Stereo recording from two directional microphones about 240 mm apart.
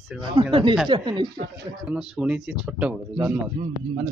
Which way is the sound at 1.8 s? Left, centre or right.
Centre.